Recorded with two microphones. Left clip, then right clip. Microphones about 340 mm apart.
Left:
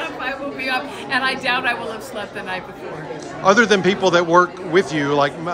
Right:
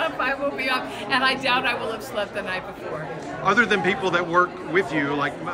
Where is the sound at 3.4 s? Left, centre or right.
Centre.